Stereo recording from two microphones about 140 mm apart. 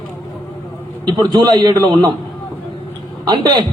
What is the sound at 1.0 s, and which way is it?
A man's voice, 30° right (ahead or behind).